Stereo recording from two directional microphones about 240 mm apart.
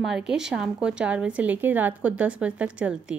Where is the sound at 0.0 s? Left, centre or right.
Centre.